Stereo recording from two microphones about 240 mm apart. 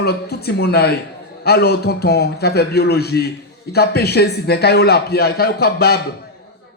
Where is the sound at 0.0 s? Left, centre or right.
Left.